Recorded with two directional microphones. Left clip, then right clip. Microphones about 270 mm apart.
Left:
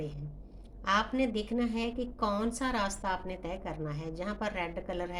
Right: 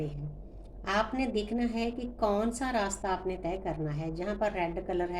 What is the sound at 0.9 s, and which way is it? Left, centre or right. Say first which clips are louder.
A woman's voice: left 1 dB; left.